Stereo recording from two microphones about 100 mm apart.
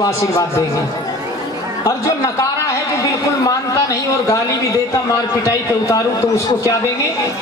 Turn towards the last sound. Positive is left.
turn(degrees=30)  # may be behind; listen again after turning